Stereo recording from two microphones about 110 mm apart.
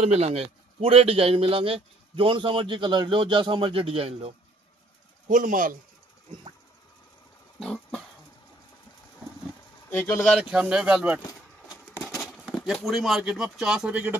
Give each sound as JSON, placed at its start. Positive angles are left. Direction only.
{"t": 0.0, "sound": "a man's voice", "side_deg": -70}
{"t": 7.6, "sound": "a sound", "side_deg": 5}
{"t": 9.8, "sound": "speech", "side_deg": 25}
{"t": 10.4, "sound": "speech", "side_deg": -5}
{"t": 12.2, "sound": "a sound", "side_deg": 0}
{"t": 12.7, "sound": "speech", "side_deg": 0}